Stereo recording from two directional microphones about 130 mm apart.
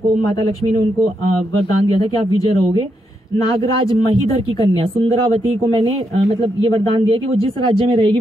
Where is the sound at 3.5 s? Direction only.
45° right (ahead or behind).